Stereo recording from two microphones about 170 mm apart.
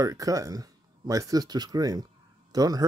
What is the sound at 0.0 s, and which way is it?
Speech, 20° right (ahead or behind).